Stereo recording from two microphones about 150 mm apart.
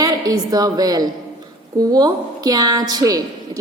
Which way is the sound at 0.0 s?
25° right (ahead or behind).